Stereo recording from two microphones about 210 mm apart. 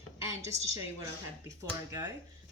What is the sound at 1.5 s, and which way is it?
Speech, 15° right (ahead or behind).